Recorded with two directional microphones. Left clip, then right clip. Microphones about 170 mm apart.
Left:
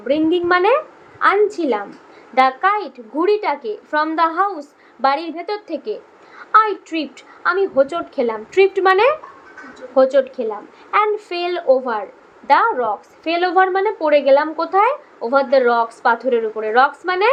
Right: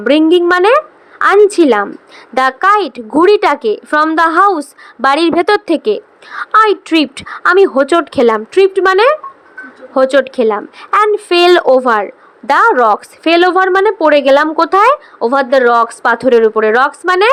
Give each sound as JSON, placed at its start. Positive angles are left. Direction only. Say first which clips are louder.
{"t": 0.0, "sound": "a woman's voice", "louder": "right 9 dB", "side_deg": -40}
{"t": 1.2, "sound": "a woman's voice", "louder": "right 8 dB", "side_deg": -45}
{"t": 9.9, "sound": "a woman's voice", "louder": "right 4 dB", "side_deg": -50}